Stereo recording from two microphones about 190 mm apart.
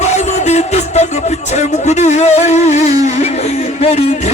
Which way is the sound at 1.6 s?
40° left (ahead or behind).